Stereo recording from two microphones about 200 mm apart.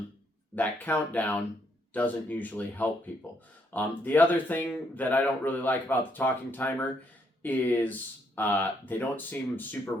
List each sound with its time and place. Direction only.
0.5 s speech: 10° left (ahead or behind)